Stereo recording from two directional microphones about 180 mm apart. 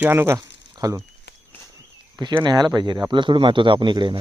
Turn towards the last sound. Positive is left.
turn(degrees=-25)  # may be behind; listen again after turning